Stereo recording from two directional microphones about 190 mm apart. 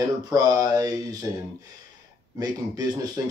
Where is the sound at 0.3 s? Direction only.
20° right (ahead or behind).